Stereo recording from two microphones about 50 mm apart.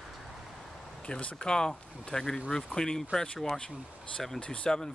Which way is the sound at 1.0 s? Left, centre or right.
Left.